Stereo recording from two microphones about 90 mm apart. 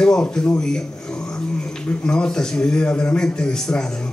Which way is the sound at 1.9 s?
10° left (ahead or behind).